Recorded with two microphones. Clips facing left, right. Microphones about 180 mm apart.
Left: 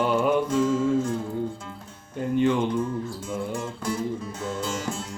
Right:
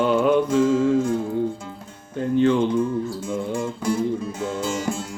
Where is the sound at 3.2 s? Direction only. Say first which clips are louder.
Right 4 dB; 10° right (ahead or behind).